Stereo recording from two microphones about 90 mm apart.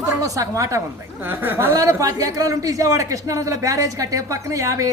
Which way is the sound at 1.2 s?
25° right (ahead or behind).